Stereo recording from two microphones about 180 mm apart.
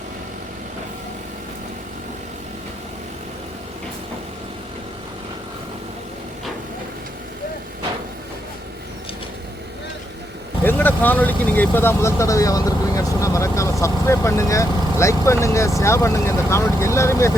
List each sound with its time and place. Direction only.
10.6 s speech: 10° left (ahead or behind)